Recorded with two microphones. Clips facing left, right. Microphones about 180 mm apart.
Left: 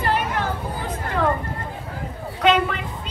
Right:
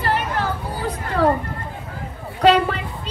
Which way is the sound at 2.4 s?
35° right (ahead or behind).